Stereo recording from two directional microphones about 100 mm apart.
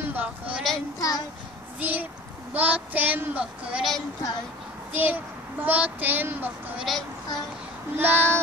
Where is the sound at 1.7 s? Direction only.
15° right (ahead or behind).